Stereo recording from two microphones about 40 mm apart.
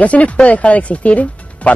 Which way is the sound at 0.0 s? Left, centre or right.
Left.